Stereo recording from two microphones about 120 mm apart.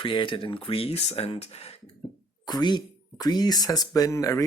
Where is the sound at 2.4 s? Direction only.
35° left (ahead or behind).